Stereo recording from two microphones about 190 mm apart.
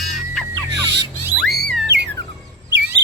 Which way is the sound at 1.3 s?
Centre (ahead or behind).